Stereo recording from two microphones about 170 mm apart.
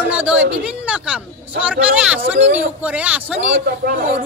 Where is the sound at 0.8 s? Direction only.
5° right (ahead or behind).